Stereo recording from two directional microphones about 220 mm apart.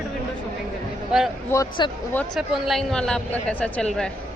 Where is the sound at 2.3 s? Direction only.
Centre (ahead or behind).